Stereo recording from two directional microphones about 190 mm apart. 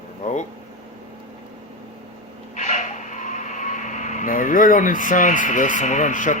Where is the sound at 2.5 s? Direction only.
40° left (ahead or behind).